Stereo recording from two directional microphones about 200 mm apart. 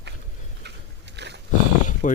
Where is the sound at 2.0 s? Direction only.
40° left (ahead or behind).